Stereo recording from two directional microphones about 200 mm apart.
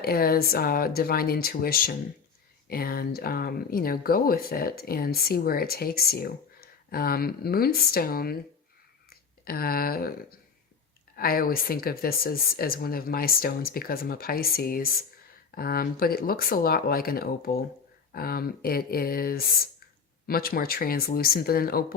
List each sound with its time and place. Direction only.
0.0 s speech: 50° left (ahead or behind)